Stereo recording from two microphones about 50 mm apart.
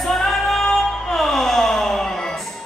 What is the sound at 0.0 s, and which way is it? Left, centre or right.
Music, centre.